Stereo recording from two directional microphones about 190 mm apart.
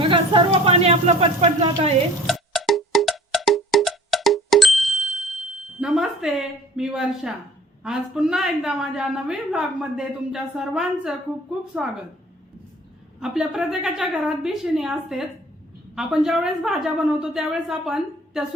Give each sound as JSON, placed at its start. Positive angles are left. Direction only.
{"t": 0.0, "sound": "speech", "side_deg": -25}
{"t": 2.2, "sound": "music", "side_deg": 0}
{"t": 7.9, "sound": "a woman's voice", "side_deg": -5}
{"t": 13.1, "sound": "a woman's voice", "side_deg": -5}